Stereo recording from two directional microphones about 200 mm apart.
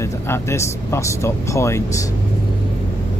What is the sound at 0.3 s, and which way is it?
Speech, 15° left (ahead or behind).